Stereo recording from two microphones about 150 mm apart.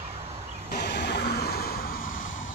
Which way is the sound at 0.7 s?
90° left.